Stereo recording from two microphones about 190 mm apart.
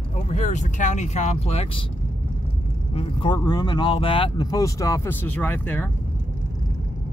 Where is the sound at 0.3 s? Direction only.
40° left (ahead or behind).